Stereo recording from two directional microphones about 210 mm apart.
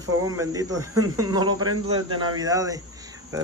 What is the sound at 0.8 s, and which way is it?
Speech, 90° right.